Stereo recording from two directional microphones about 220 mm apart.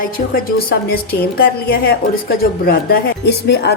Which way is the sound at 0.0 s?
40° left (ahead or behind).